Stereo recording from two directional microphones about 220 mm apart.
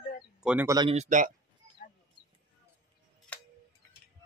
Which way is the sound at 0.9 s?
35° right (ahead or behind).